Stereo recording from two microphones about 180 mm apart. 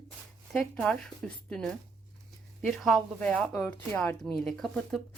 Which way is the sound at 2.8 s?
5° left (ahead or behind).